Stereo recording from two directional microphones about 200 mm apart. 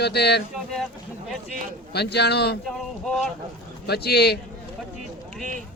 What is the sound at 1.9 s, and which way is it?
Speech, 55° left (ahead or behind).